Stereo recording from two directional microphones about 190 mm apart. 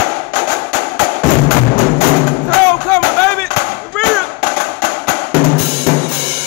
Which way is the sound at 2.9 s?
15° left (ahead or behind).